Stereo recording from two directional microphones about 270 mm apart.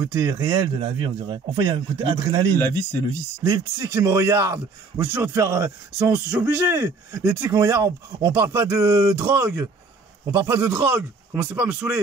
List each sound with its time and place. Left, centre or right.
0.0 s a man's voice: centre